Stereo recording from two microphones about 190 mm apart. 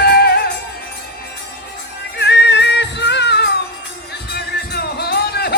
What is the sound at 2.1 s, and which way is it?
Music, 65° left (ahead or behind).